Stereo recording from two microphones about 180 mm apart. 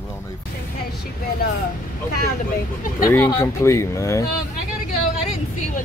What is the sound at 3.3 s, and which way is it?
Speech, 15° left (ahead or behind).